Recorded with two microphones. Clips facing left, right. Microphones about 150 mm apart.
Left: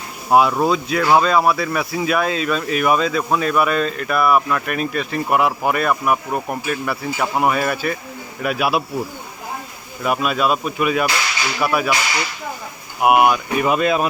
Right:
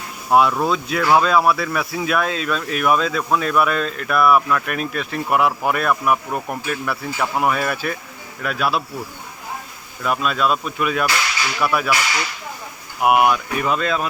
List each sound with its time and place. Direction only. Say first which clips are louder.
0.3 s speech: left 1 dB; centre (ahead or behind)
10.0 s speech: left 1 dB; 10° left (ahead or behind)
13.0 s speech: left 2 dB; 5° left (ahead or behind)